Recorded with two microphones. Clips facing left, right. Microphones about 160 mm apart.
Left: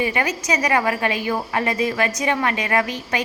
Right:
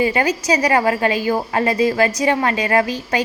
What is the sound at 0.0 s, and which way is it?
A woman's voice, 35° right (ahead or behind).